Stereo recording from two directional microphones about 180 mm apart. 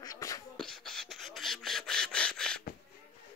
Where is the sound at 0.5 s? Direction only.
5° left (ahead or behind).